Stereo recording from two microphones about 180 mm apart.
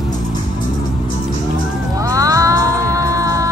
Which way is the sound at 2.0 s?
20° right (ahead or behind).